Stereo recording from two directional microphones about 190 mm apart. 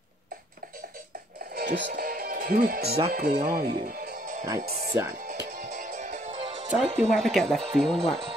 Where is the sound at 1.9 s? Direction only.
45° right (ahead or behind).